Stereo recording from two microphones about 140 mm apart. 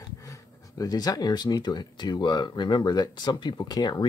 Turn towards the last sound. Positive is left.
turn(degrees=30)  # may be behind; listen again after turning